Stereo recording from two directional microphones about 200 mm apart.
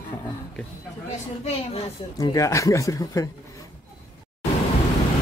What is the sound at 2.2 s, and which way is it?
Speech, 15° left (ahead or behind).